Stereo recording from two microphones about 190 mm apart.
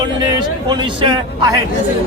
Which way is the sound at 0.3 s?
25° right (ahead or behind).